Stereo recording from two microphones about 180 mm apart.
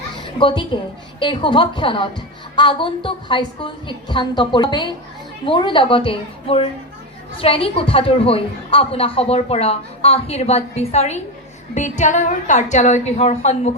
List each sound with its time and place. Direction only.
0.2 s a child's voice: 25° left (ahead or behind)